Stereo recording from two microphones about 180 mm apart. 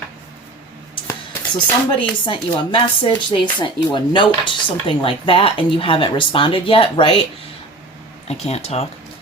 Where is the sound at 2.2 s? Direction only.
25° left (ahead or behind).